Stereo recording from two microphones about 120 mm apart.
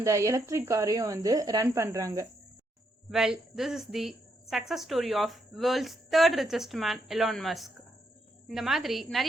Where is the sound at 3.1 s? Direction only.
5° right (ahead or behind).